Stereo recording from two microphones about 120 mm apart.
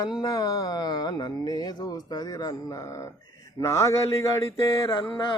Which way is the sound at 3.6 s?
25° left (ahead or behind).